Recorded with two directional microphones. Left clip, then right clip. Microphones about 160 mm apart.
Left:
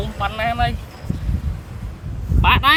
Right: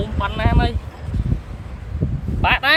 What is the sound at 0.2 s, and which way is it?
Speech, centre (ahead or behind).